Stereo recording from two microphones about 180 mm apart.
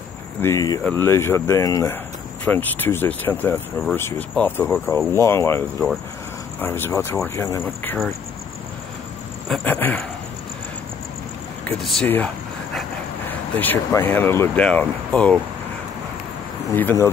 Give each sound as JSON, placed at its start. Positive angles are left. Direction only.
{"t": 0.4, "sound": "speech", "side_deg": 15}
{"t": 9.5, "sound": "speech", "side_deg": 10}
{"t": 11.6, "sound": "speech", "side_deg": 5}
{"t": 13.6, "sound": "speech", "side_deg": 10}